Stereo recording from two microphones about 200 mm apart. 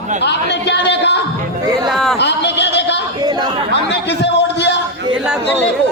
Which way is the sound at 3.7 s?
60° left (ahead or behind).